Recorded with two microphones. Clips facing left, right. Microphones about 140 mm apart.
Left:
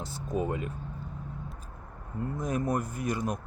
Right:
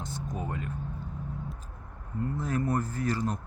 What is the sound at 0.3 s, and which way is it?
Speech, 10° left (ahead or behind).